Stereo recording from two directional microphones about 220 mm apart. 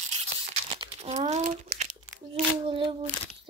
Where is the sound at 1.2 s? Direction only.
30° right (ahead or behind).